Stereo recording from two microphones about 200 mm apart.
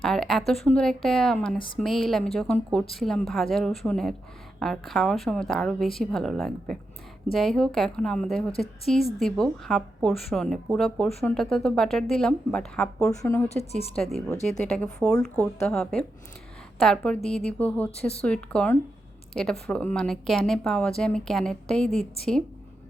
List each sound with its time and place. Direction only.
0.0 s speech: centre (ahead or behind)
1.5 s speech: 25° left (ahead or behind)
1.8 s speech: centre (ahead or behind)
13.5 s a woman's voice: 30° left (ahead or behind)
13.9 s speech: 5° left (ahead or behind)